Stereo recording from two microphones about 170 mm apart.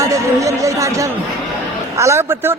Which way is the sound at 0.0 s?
20° right (ahead or behind).